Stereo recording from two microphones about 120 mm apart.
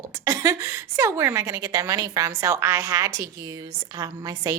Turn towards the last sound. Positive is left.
turn(degrees=-30)  # may be behind; listen again after turning